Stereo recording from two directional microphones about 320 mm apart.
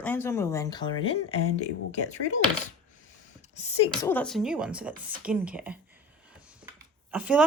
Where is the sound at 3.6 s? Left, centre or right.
Centre.